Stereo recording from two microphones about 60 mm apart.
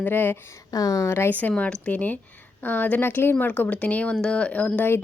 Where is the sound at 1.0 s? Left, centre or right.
Left.